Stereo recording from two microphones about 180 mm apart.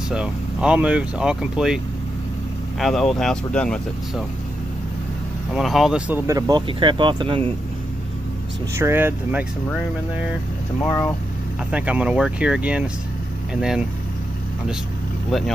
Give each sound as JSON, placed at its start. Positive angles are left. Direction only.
{"t": 0.1, "sound": "speech", "side_deg": -5}
{"t": 2.8, "sound": "speech", "side_deg": 0}
{"t": 5.5, "sound": "speech", "side_deg": 0}
{"t": 8.7, "sound": "speech", "side_deg": -15}
{"t": 10.8, "sound": "speech", "side_deg": 15}
{"t": 11.7, "sound": "speech", "side_deg": -5}